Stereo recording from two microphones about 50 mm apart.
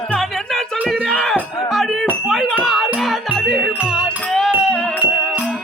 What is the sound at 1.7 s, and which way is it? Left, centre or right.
Music, centre.